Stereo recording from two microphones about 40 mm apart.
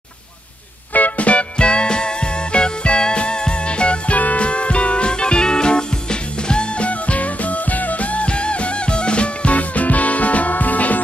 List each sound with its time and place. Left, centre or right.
0.9 s music: left
6.9 s music: left